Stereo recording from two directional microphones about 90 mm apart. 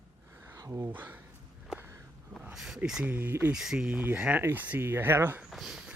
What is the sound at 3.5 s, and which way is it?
Speech, 5° right (ahead or behind).